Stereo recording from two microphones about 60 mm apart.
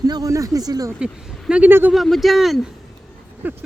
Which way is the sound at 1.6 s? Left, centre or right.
Right.